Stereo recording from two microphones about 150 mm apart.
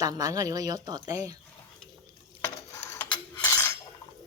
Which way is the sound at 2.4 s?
20° left (ahead or behind).